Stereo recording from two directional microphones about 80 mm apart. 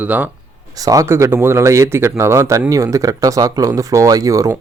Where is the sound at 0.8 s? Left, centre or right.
Right.